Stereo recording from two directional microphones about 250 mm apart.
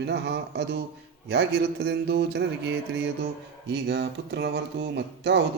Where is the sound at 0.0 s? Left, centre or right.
Right.